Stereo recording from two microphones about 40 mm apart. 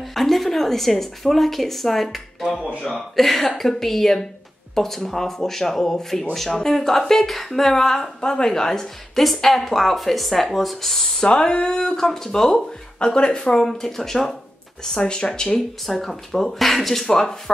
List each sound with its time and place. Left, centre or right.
0.0 s a woman's voice: centre
11.2 s speech: left
12.4 s speech: left
13.7 s speech: centre
15.0 s speech: left
15.9 s speech: centre